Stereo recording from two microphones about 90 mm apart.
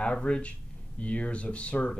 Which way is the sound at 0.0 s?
10° left (ahead or behind).